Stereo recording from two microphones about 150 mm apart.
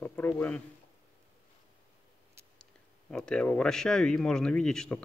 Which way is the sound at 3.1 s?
5° left (ahead or behind).